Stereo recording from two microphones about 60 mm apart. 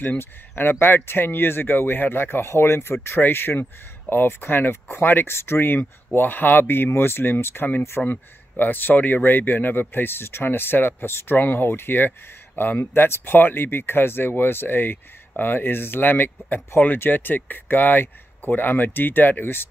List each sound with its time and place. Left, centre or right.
0.0 s speech: left